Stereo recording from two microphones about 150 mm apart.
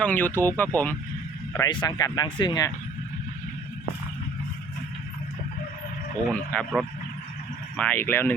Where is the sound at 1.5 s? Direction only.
25° left (ahead or behind).